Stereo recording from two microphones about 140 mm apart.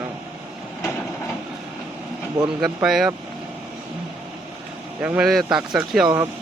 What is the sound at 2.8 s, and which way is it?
Speech, centre (ahead or behind).